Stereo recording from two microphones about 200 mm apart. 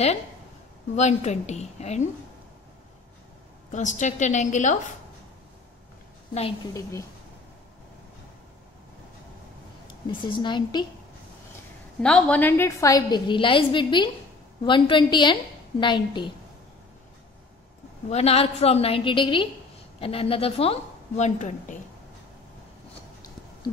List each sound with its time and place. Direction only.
0.9 s a woman's voice: 35° left (ahead or behind)
3.7 s a woman's voice: 35° left (ahead or behind)
6.3 s a woman's voice: 30° left (ahead or behind)
6.7 s a woman's voice: 15° left (ahead or behind)
10.0 s a woman's voice: 25° left (ahead or behind)
12.0 s a woman's voice: 5° left (ahead or behind); by 16.3 s 25° left (ahead or behind)
18.1 s a woman's voice: 30° left (ahead or behind)